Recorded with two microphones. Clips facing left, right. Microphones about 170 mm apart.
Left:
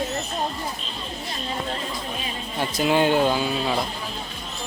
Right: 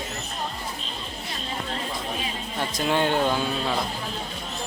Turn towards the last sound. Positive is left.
turn(degrees=5)  # may be behind; listen again after turning